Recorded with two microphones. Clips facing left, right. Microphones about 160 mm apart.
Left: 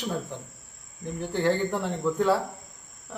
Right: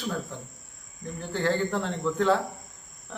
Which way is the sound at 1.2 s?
15° left (ahead or behind).